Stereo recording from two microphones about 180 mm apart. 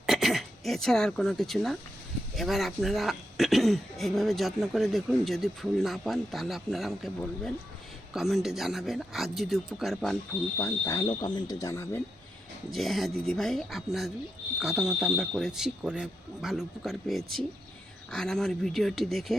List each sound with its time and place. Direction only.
0.0 s speech: centre (ahead or behind)
10.6 s speech: 15° left (ahead or behind)
12.7 s speech: centre (ahead or behind)